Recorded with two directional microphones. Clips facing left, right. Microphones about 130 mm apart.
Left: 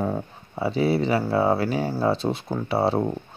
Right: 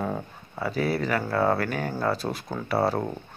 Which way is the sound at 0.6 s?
25° left (ahead or behind).